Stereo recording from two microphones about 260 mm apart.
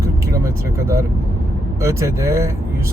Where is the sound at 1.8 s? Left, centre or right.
Centre.